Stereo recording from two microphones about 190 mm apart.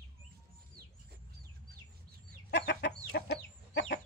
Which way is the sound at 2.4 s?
65° left (ahead or behind).